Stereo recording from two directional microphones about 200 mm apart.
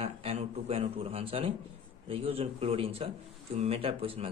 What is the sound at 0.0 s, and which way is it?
A man's voice, 30° right (ahead or behind).